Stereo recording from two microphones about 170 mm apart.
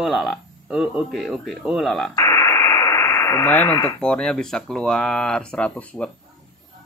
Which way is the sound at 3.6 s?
15° left (ahead or behind).